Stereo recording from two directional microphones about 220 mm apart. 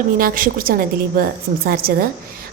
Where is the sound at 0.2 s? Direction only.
40° right (ahead or behind).